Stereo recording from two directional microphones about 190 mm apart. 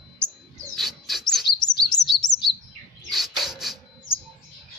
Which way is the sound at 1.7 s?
25° left (ahead or behind).